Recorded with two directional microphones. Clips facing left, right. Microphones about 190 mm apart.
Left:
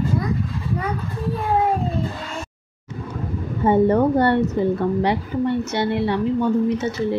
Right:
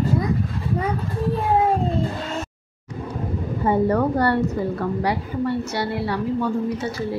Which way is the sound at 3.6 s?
25° left (ahead or behind).